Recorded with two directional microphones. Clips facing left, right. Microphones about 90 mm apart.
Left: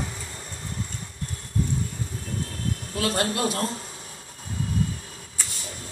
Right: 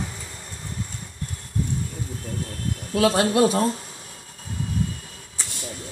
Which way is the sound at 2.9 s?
90° right.